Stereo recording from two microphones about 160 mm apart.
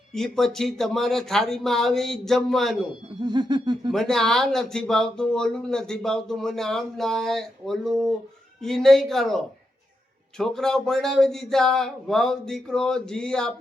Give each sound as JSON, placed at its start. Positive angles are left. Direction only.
{"t": 0.1, "sound": "speech", "side_deg": 5}
{"t": 3.2, "sound": "a sound", "side_deg": -25}
{"t": 3.9, "sound": "speech", "side_deg": 5}